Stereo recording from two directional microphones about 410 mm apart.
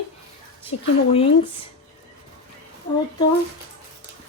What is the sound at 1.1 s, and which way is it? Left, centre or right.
Speech, centre.